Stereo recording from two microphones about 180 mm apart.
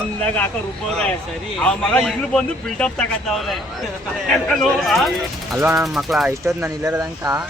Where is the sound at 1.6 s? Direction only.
5° left (ahead or behind).